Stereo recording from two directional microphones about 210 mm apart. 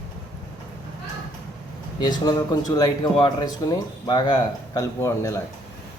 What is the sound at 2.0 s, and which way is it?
Speech, 20° left (ahead or behind).